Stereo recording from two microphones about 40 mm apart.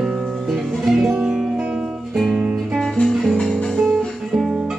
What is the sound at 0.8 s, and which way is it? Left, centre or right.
Music, centre.